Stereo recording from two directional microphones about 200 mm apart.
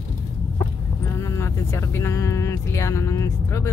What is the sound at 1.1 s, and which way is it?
Speech, 15° left (ahead or behind).